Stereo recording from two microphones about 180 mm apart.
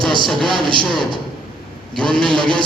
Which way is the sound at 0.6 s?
25° right (ahead or behind).